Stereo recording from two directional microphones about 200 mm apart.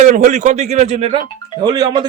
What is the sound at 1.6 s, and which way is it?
Speech, 20° right (ahead or behind).